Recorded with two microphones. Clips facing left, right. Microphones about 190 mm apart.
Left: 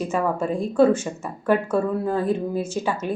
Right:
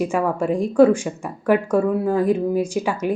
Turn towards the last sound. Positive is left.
turn(degrees=-15)  # may be behind; listen again after turning